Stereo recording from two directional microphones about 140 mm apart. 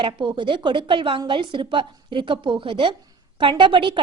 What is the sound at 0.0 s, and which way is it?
A woman's voice, 35° right (ahead or behind).